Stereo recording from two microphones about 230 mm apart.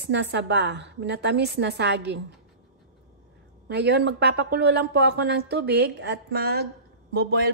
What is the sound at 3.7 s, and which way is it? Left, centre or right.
Speech, right.